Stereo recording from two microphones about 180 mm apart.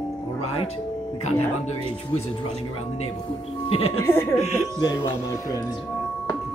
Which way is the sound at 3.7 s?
35° left (ahead or behind).